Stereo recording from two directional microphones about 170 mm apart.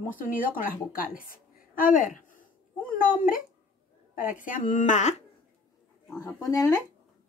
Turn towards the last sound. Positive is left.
turn(degrees=20)  # may be behind; listen again after turning